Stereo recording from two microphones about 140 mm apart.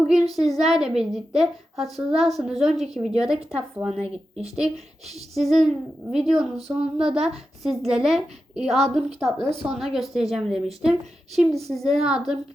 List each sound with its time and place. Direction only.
0.1 s speech: centre (ahead or behind)
4.0 s speech: 45° right (ahead or behind)
4.5 s speech: centre (ahead or behind)